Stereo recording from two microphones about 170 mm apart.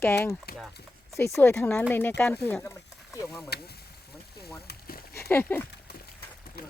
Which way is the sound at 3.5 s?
70° left (ahead or behind).